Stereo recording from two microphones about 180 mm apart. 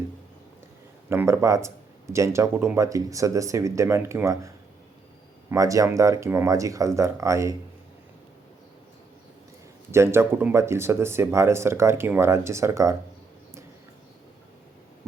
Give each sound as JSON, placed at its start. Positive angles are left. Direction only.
{"t": 1.1, "sound": "speech", "side_deg": -15}
{"t": 9.9, "sound": "speech", "side_deg": -15}